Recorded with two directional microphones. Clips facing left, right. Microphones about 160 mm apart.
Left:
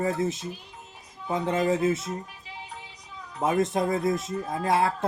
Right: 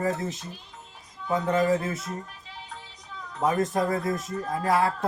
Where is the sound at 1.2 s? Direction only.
25° left (ahead or behind).